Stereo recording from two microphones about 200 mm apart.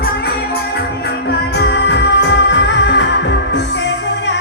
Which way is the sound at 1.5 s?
60° left (ahead or behind).